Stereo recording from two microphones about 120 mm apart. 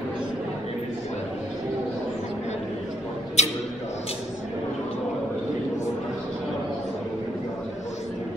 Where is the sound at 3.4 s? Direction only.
70° left (ahead or behind).